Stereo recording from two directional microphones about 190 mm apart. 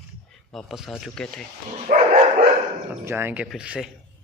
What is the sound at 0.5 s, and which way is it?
Speech, centre (ahead or behind).